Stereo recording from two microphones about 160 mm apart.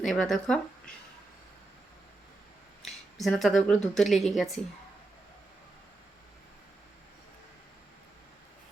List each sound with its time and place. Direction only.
0.0 s speech: centre (ahead or behind)
2.8 s speech: centre (ahead or behind)